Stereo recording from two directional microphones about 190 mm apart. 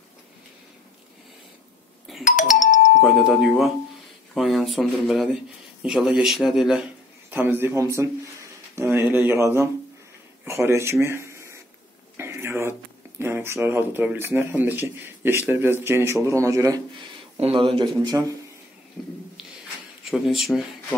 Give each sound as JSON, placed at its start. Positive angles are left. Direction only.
{"t": 2.2, "sound": "doorbell", "side_deg": 45}
{"t": 3.0, "sound": "speech", "side_deg": 0}
{"t": 12.2, "sound": "a sound", "side_deg": -15}
{"t": 13.2, "sound": "speech", "side_deg": -10}
{"t": 17.4, "sound": "speech", "side_deg": -30}
{"t": 19.0, "sound": "a sound", "side_deg": 5}
{"t": 20.1, "sound": "speech", "side_deg": 0}